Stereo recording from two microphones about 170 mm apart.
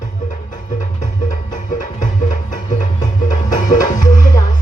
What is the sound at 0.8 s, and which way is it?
Music, 45° left (ahead or behind).